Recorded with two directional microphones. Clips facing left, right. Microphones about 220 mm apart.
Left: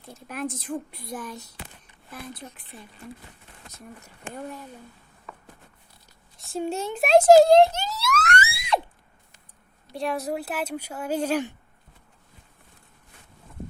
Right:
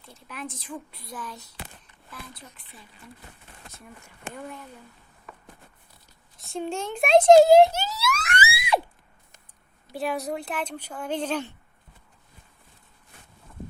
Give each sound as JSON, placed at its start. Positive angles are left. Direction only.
{"t": 0.0, "sound": "a child's voice", "side_deg": 45}
{"t": 6.4, "sound": "speech", "side_deg": 5}
{"t": 8.4, "sound": "a sound", "side_deg": -5}
{"t": 9.9, "sound": "a woman's voice", "side_deg": 0}